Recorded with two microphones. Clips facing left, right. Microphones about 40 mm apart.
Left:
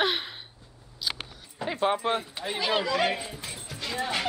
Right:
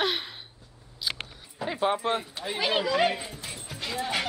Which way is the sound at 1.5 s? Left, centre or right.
Centre.